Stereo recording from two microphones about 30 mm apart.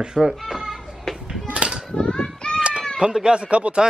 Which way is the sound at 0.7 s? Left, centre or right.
Centre.